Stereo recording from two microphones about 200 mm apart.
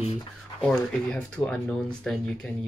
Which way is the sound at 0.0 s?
30° left (ahead or behind).